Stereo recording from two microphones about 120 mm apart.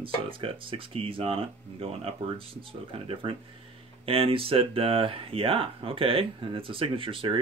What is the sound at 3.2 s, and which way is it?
Speech, 50° right (ahead or behind).